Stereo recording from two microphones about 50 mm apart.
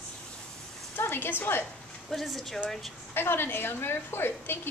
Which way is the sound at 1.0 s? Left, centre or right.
Left.